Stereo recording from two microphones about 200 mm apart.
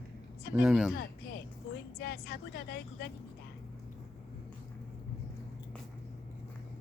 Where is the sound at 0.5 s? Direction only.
5° right (ahead or behind).